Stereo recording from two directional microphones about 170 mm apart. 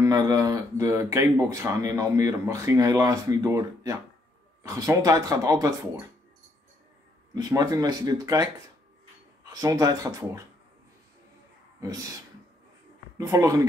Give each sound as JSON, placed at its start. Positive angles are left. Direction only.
{"t": 0.0, "sound": "speech", "side_deg": -20}
{"t": 7.3, "sound": "speech", "side_deg": -20}
{"t": 11.8, "sound": "speech", "side_deg": -20}
{"t": 13.2, "sound": "speech", "side_deg": -20}